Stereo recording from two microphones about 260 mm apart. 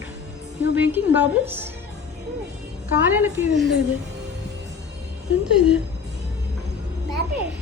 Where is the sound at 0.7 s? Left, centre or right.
Centre.